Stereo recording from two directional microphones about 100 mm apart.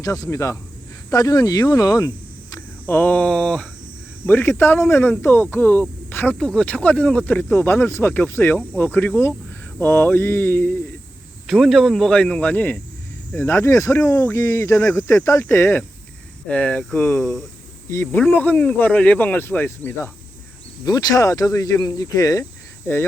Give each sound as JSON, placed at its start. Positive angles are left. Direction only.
{"t": 0.0, "sound": "speech", "side_deg": 35}
{"t": 2.6, "sound": "speech", "side_deg": 20}
{"t": 11.4, "sound": "speech", "side_deg": 0}
{"t": 16.5, "sound": "speech", "side_deg": 10}
{"t": 20.8, "sound": "speech", "side_deg": 40}